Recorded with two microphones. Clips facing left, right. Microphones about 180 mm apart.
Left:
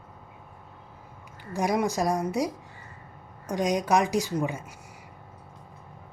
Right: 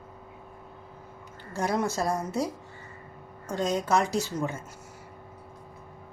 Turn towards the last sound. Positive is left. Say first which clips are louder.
# left 2 dB
turn(degrees=15)  # may be behind; listen again after turning